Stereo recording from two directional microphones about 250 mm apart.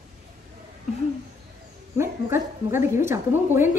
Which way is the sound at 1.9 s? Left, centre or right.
Centre.